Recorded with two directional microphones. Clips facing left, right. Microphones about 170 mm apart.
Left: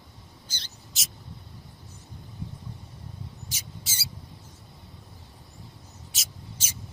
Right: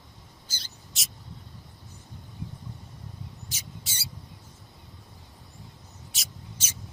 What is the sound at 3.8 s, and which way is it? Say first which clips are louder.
Mouse: left 1 dB; centre (ahead or behind).